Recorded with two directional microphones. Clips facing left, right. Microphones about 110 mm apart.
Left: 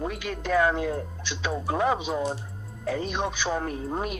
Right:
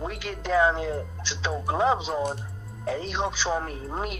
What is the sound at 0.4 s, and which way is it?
Speech, 20° right (ahead or behind).